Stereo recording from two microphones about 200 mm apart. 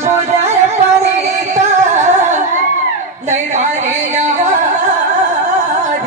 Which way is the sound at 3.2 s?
40° right (ahead or behind).